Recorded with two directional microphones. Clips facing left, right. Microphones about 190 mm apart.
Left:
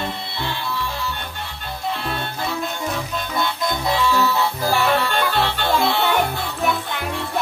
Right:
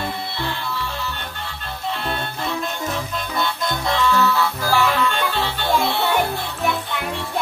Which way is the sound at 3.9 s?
10° left (ahead or behind).